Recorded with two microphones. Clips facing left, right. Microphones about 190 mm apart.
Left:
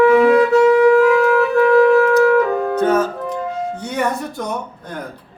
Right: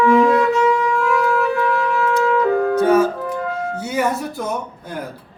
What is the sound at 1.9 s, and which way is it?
Music, 60° left (ahead or behind).